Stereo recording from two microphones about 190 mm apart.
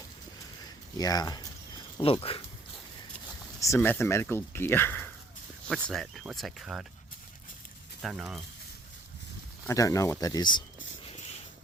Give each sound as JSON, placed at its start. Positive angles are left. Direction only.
{"t": 0.9, "sound": "speech", "side_deg": 20}
{"t": 3.6, "sound": "speech", "side_deg": 15}
{"t": 8.0, "sound": "speech", "side_deg": 0}
{"t": 9.6, "sound": "speech", "side_deg": 15}